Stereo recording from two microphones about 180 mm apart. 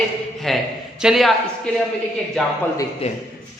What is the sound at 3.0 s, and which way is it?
Speech, 35° left (ahead or behind).